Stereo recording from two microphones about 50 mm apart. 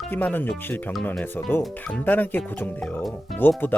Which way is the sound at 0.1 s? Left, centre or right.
Left.